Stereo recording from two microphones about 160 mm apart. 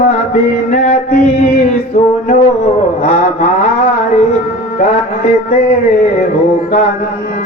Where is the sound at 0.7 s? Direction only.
45° left (ahead or behind).